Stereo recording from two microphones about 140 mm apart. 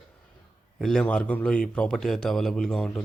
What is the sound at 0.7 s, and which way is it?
Speech, 5° left (ahead or behind).